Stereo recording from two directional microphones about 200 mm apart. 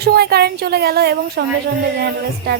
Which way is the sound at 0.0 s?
55° right (ahead or behind).